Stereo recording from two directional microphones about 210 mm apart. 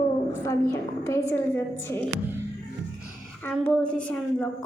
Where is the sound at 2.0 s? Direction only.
10° right (ahead or behind).